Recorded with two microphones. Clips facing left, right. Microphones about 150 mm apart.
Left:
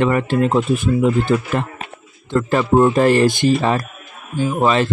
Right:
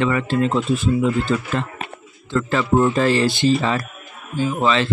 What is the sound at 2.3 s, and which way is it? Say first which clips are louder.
Speech: left 3 dB; 40° left (ahead or behind).